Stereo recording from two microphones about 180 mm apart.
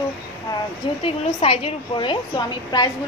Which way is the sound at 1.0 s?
30° left (ahead or behind).